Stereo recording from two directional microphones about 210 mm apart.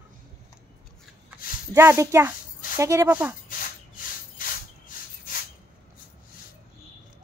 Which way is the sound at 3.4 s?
40° left (ahead or behind).